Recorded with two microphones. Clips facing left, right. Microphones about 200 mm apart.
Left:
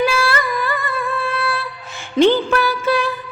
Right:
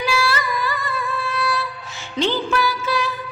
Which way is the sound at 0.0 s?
55° left (ahead or behind).